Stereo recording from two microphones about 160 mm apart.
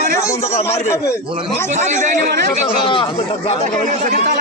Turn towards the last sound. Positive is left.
turn(degrees=30)  # may be behind; listen again after turning